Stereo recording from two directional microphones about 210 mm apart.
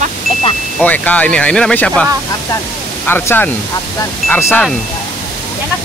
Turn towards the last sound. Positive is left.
turn(degrees=10)  # may be behind; listen again after turning